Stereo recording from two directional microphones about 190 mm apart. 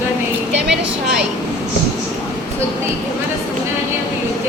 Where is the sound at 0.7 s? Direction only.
5° right (ahead or behind).